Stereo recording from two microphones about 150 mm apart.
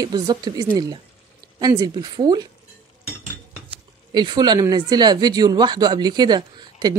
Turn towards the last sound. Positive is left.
turn(degrees=-30)  # may be behind; listen again after turning